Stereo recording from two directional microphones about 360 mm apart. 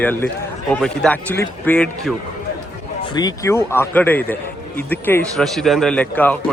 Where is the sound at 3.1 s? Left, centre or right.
Centre.